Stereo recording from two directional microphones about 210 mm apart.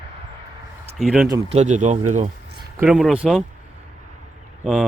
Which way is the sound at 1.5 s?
35° right (ahead or behind).